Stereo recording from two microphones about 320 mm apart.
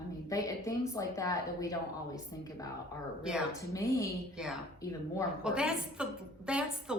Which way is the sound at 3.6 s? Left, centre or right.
Centre.